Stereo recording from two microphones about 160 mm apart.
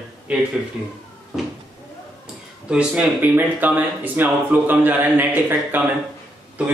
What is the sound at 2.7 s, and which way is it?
Speech, 5° right (ahead or behind).